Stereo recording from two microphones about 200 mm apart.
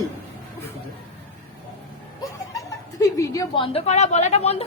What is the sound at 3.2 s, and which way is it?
A woman's voice, 15° left (ahead or behind).